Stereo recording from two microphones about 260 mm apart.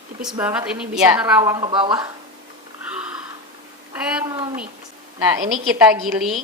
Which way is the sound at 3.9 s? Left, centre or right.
Centre.